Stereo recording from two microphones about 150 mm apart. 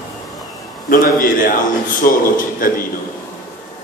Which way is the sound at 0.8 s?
70° left (ahead or behind).